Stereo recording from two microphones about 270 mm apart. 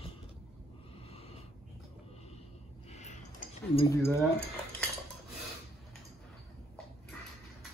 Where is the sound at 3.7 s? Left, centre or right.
Centre.